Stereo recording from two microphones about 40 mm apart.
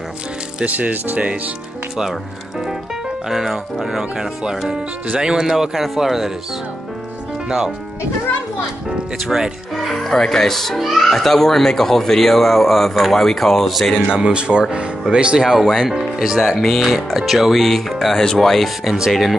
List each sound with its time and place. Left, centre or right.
0.7 s speech: right
3.3 s speech: centre; by 5.5 s right
5.5 s speech: centre
7.4 s speech: centre
9.2 s speech: centre
9.8 s a child's voice: centre
14.1 s speech: right
15.5 s speech: centre
16.0 s a child's voice: centre
18.9 s speech: centre